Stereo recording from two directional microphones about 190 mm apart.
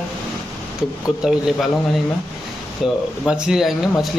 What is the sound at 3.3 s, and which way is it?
Speech, 5° right (ahead or behind).